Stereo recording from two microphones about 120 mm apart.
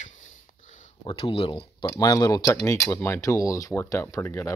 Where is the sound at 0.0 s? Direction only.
90° left.